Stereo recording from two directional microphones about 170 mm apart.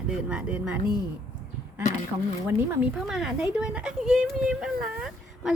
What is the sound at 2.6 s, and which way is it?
A woman's voice, 5° right (ahead or behind).